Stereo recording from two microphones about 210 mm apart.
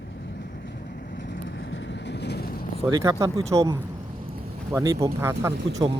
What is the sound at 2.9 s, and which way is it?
Speech, 15° right (ahead or behind).